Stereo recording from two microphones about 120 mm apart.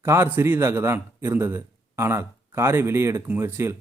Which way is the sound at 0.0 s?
20° right (ahead or behind).